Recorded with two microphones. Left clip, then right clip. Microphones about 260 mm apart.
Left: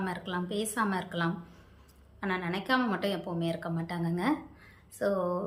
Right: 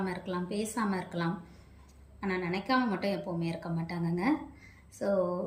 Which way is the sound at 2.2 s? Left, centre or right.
Left.